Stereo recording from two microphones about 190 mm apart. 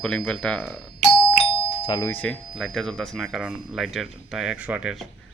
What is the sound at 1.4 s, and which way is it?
Doorbell, 25° left (ahead or behind).